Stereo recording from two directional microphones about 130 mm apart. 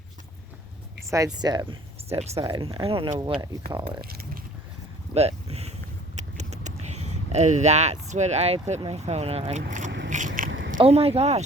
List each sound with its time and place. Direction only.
1.1 s speech: 30° right (ahead or behind)
2.0 s speech: 55° right (ahead or behind)
2.4 s speech: 40° right (ahead or behind)
5.1 s a sound: 55° right (ahead or behind)
6.1 s vehicle: 65° right (ahead or behind)
8.8 s speech: 55° right (ahead or behind); by 10.8 s 90° right
10.8 s speech: 50° right (ahead or behind)